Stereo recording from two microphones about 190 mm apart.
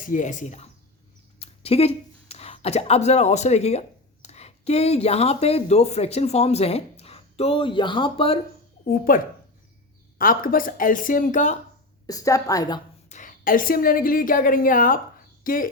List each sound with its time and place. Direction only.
0.0 s speech: 45° left (ahead or behind); by 8.4 s 30° left (ahead or behind)
8.9 s a woman's voice: 45° left (ahead or behind)
12.0 s a woman's voice: 15° left (ahead or behind)
13.1 s a woman's voice: 40° left (ahead or behind)